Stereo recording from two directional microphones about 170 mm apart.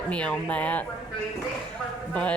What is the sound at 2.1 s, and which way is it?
Speech, 5° left (ahead or behind).